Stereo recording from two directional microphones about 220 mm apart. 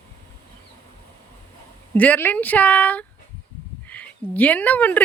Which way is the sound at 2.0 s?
10° left (ahead or behind).